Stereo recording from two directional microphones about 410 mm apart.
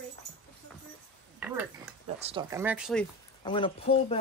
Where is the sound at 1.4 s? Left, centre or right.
Centre.